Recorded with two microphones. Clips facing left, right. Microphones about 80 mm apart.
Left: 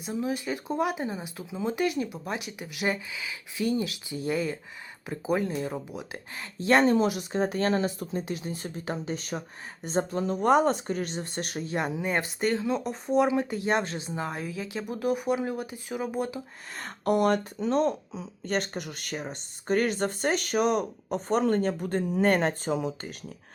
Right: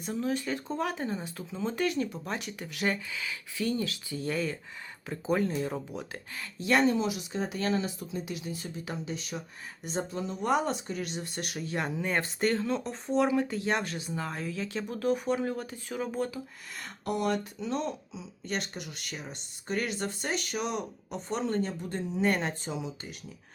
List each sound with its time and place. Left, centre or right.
0.0 s speech: centre
6.4 s speech: left; by 16.4 s centre
16.7 s speech: left